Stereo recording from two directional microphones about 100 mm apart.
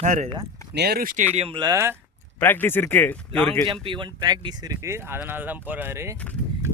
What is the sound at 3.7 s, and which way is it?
Speech, 55° right (ahead or behind).